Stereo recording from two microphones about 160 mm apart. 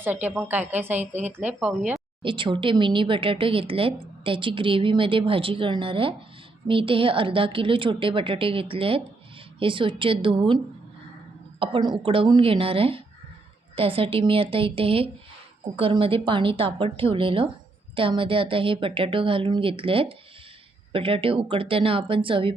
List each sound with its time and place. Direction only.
0.0 s a woman's voice: 10° right (ahead or behind)
2.2 s speech: 30° right (ahead or behind)
11.6 s speech: 30° right (ahead or behind)